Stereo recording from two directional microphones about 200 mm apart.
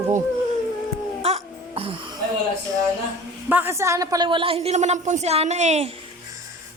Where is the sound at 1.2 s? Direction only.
30° right (ahead or behind).